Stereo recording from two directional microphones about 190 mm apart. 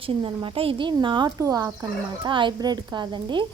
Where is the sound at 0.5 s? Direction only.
30° right (ahead or behind).